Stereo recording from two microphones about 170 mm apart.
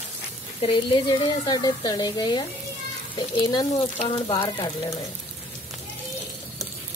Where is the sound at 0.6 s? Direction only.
30° left (ahead or behind).